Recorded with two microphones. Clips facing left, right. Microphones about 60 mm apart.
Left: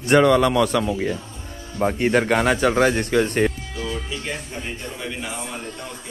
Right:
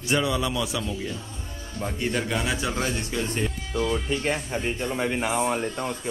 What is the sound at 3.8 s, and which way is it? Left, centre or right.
Speech, right.